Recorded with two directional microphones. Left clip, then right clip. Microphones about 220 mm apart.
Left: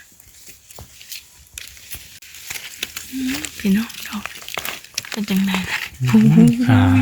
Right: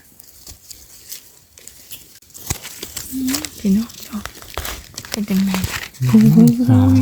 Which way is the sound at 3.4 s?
25° right (ahead or behind).